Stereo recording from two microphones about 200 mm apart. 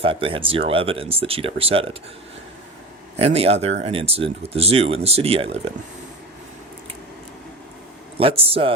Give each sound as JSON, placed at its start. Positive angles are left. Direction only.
{"t": 0.0, "sound": "speech", "side_deg": -25}
{"t": 3.2, "sound": "speech", "side_deg": -30}
{"t": 8.2, "sound": "speech", "side_deg": -30}